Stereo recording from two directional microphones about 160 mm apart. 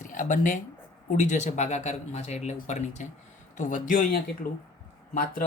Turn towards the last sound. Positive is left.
turn(degrees=70)  # may be behind; listen again after turning